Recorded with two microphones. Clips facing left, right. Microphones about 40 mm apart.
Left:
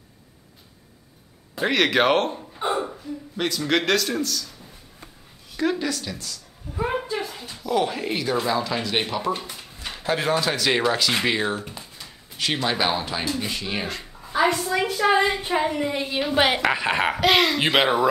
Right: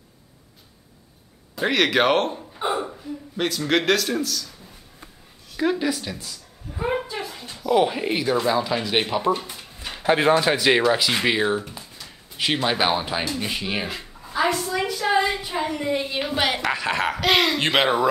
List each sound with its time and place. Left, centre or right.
1.6 s speech: centre
5.6 s a sound: centre
7.6 s speech: centre
10.0 s speech: right; by 14.3 s centre
14.3 s a sound: centre
15.0 s a sound: left
15.6 s speech: centre
16.5 s speech: centre
17.3 s speech: centre